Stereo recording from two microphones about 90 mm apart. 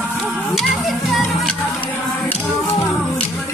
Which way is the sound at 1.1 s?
Centre (ahead or behind).